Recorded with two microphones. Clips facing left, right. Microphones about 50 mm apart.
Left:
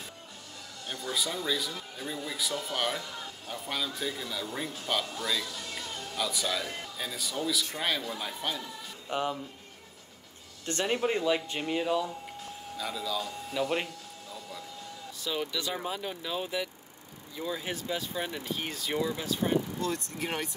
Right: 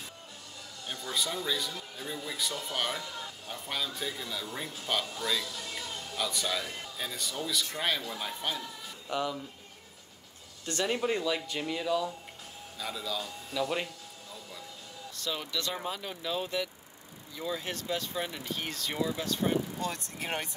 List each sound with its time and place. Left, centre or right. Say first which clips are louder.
0.8 s speech: left 1 dB; centre
9.1 s speech: left 1 dB; left
10.7 s speech: left 1 dB; left
12.7 s speech: left 2 dB; centre
13.5 s speech: left 1 dB; centre
15.1 s speech: left 2 dB; centre
19.9 s speech: left 2 dB; centre